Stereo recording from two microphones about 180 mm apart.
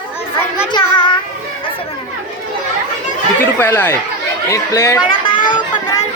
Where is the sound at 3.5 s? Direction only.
10° left (ahead or behind).